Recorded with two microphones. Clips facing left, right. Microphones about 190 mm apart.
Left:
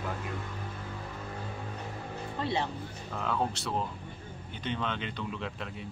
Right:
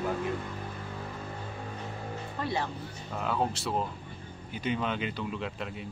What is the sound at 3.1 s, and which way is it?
Speech, 5° right (ahead or behind).